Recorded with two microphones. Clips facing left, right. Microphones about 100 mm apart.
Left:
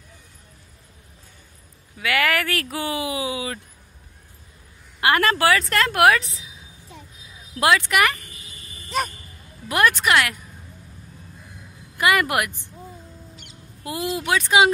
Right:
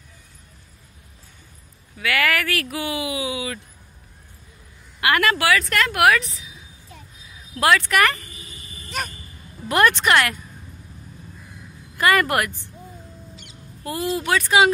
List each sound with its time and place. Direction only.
2.0 s speech: 20° left (ahead or behind)
5.0 s speech: 30° left (ahead or behind)
7.6 s speech: 20° left (ahead or behind)
9.7 s speech: 5° left (ahead or behind)
12.0 s speech: 15° left (ahead or behind)
13.8 s speech: 15° left (ahead or behind)